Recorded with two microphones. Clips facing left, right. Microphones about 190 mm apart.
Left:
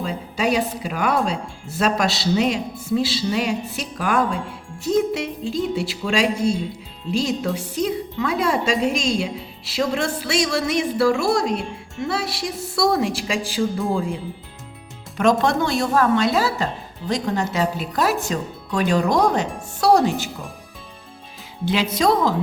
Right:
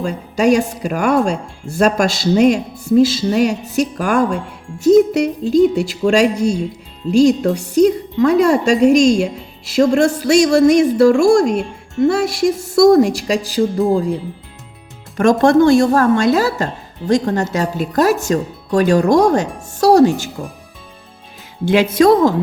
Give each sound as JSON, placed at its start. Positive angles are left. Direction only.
{"t": 0.0, "sound": "a woman's voice", "side_deg": -45}
{"t": 15.2, "sound": "a woman's voice", "side_deg": -50}
{"t": 21.6, "sound": "a woman's voice", "side_deg": -50}